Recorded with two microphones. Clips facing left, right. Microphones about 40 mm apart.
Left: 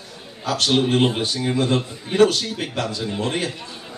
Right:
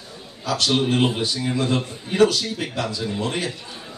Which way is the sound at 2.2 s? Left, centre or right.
Left.